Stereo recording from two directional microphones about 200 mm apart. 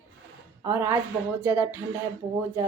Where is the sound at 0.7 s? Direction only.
15° right (ahead or behind).